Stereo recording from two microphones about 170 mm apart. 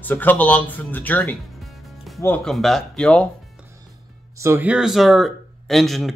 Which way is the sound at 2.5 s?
Centre (ahead or behind).